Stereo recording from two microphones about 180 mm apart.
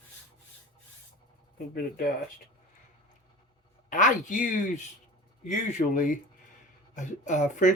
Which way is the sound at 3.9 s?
45° left (ahead or behind).